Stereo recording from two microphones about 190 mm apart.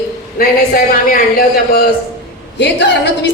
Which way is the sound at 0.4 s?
50° left (ahead or behind).